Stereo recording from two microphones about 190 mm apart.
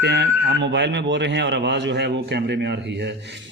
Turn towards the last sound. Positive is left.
turn(degrees=-65)  # may be behind; listen again after turning